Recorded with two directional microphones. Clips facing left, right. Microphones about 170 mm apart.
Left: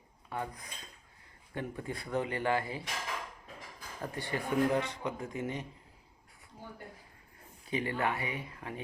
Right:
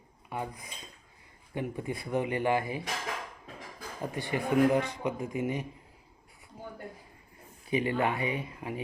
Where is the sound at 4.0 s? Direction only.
15° right (ahead or behind).